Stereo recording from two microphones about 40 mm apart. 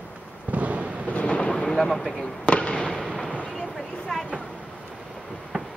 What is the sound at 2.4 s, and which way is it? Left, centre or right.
Fireworks, left.